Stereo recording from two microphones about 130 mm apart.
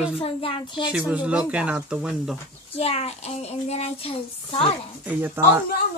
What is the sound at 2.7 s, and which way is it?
Speech, 50° left (ahead or behind).